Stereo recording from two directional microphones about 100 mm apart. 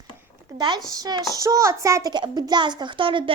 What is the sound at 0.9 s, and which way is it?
A child's voice, 40° right (ahead or behind).